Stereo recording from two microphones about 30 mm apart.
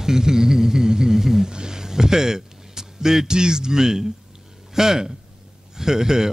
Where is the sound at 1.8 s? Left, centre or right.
Centre.